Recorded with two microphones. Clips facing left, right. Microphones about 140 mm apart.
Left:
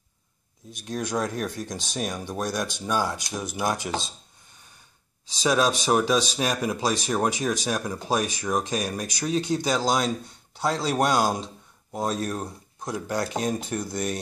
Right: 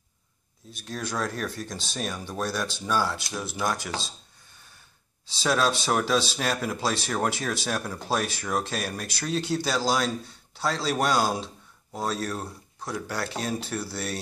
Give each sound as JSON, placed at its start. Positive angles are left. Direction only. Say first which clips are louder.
{"t": 0.7, "sound": "speech", "louder": "left 3 dB", "side_deg": 20}
{"t": 5.4, "sound": "speech", "louder": "left 2 dB", "side_deg": 15}